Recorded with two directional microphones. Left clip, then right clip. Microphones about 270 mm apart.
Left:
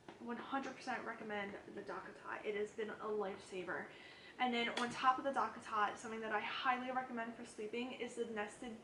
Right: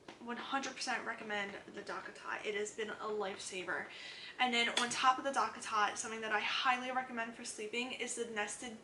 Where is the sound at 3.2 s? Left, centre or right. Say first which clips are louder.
Right 4 dB; centre.